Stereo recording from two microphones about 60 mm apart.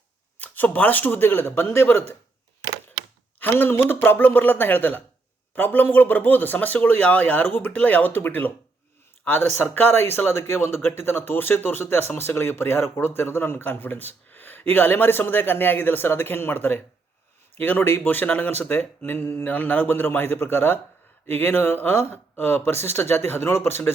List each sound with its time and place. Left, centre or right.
0.3 s speech: left
3.4 s speech: left